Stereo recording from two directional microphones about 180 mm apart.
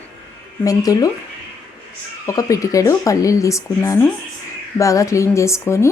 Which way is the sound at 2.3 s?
20° left (ahead or behind).